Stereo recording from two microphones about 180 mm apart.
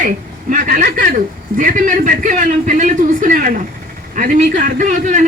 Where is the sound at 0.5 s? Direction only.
50° right (ahead or behind).